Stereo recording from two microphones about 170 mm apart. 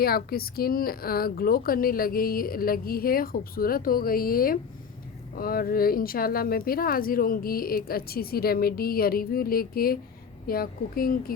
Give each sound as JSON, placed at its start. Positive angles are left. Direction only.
{"t": 0.0, "sound": "speech", "side_deg": 60}